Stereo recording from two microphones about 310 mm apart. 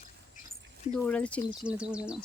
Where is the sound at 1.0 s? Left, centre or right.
Centre.